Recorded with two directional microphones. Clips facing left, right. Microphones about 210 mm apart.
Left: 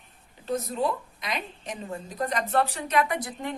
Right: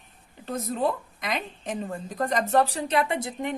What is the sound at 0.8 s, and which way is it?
A woman's voice, 50° right (ahead or behind).